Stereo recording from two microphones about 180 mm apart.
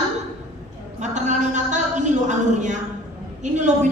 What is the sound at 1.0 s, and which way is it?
A woman's voice, 40° right (ahead or behind).